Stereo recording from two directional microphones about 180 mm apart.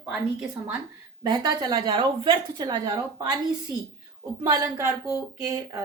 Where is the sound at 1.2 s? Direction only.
25° right (ahead or behind).